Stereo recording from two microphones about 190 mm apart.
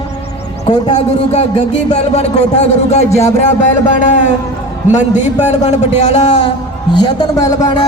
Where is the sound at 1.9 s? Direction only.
35° left (ahead or behind).